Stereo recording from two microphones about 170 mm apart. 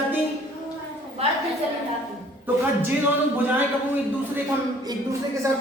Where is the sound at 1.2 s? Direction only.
35° right (ahead or behind).